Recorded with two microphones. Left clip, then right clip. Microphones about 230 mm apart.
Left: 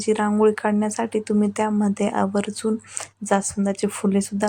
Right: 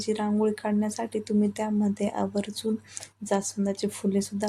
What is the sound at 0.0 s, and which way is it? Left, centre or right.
Speech, centre.